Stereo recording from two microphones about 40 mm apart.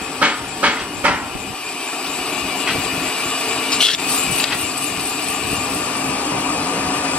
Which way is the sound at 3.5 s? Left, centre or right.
Centre.